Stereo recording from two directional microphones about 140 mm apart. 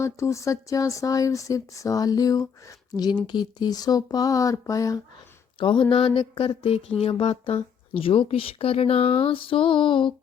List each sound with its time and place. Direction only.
0.0 s speech: 20° left (ahead or behind)
5.5 s speech: 35° left (ahead or behind)